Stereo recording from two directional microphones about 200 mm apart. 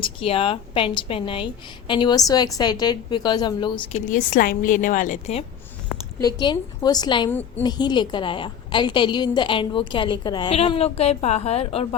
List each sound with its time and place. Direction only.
0.0 s a woman's voice: 25° left (ahead or behind)
4.1 s a woman's voice: 45° left (ahead or behind)
6.1 s a woman's voice: 20° left (ahead or behind)
7.3 s a woman's voice: 10° left (ahead or behind)
7.6 s a woman's voice: 20° left (ahead or behind)